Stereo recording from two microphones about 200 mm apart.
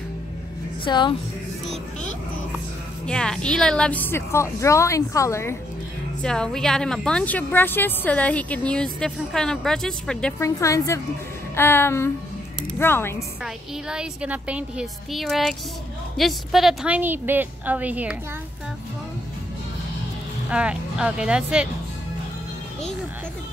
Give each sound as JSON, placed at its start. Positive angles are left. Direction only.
{"t": 0.8, "sound": "a woman's voice", "side_deg": 20}
{"t": 3.1, "sound": "a woman's voice", "side_deg": 5}
{"t": 10.4, "sound": "a woman's voice", "side_deg": 15}
{"t": 13.4, "sound": "a woman's voice", "side_deg": -5}
{"t": 20.4, "sound": "a woman's voice", "side_deg": -5}